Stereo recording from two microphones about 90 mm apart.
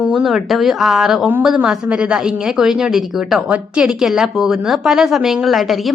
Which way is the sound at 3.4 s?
15° right (ahead or behind).